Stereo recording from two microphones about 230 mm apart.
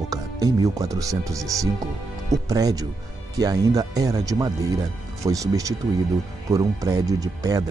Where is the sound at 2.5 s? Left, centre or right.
Centre.